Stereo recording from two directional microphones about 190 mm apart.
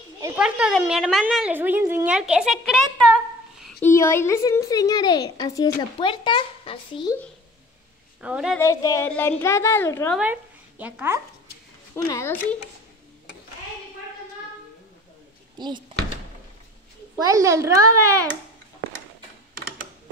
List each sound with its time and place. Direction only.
0.4 s speech: 5° right (ahead or behind)
3.8 s a woman's voice: 15° left (ahead or behind)
8.2 s speech: 5° right (ahead or behind)
8.5 s a woman's voice: 15° left (ahead or behind)
10.1 s speech: 10° right (ahead or behind)
11.9 s a woman's voice: 15° left (ahead or behind)
15.5 s speech: 20° right (ahead or behind)
17.1 s a child's voice: 15° right (ahead or behind)